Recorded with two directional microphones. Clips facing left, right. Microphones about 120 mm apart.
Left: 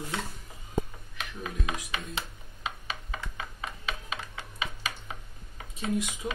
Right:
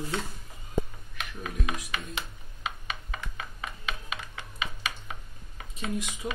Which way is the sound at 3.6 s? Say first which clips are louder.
Right 1 dB; 35° left (ahead or behind).